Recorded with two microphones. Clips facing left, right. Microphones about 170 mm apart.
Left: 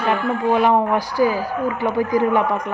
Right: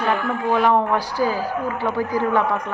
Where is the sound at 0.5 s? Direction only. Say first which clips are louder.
Even; 15° left (ahead or behind).